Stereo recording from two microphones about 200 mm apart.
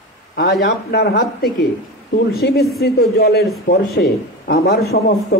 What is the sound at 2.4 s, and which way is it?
A man's voice, 50° left (ahead or behind).